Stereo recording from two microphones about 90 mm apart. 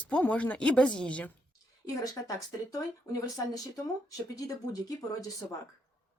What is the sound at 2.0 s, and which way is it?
Speech, 40° left (ahead or behind).